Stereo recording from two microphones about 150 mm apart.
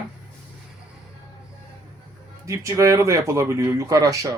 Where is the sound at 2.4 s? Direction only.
20° right (ahead or behind).